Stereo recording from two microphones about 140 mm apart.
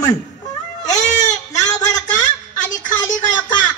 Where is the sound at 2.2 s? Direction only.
65° left (ahead or behind).